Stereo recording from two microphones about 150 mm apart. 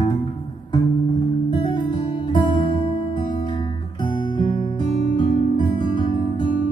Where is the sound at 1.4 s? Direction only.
35° left (ahead or behind).